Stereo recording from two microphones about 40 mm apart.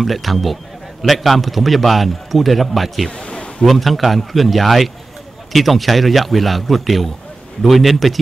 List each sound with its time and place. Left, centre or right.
0.0 s a man's voice: centre
3.1 s a sound: left
3.6 s a man's voice: centre